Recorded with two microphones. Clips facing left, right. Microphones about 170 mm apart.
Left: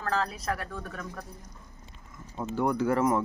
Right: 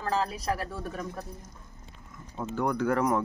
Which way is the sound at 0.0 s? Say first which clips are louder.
Right 1 dB; 20° right (ahead or behind).